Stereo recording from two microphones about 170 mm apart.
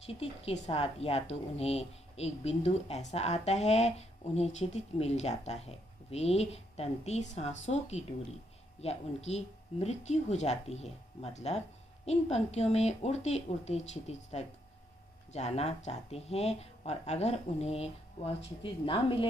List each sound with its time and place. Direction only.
0.0 s speech: 35° left (ahead or behind)
15.3 s speech: 40° left (ahead or behind)